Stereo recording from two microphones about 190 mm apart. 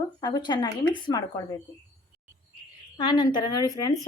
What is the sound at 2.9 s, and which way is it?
Speech, 25° left (ahead or behind).